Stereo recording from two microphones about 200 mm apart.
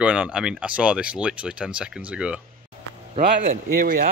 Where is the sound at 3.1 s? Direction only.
45° right (ahead or behind).